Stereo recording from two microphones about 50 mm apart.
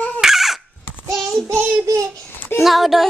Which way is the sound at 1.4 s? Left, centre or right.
Right.